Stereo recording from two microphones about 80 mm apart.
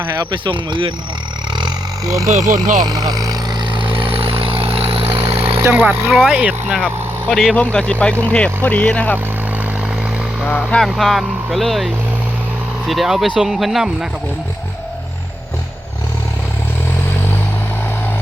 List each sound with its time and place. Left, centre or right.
0.2 s speech: right
2.1 s speech: right
3.7 s vehicle: right
5.6 s speech: right
6.1 s speech: centre
6.7 s speech: centre
7.5 s speech: centre
10.6 s speech: centre
12.9 s speech: centre